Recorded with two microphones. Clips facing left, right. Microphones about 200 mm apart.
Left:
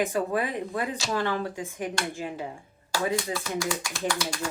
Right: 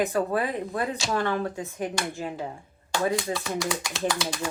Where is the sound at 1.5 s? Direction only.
15° left (ahead or behind).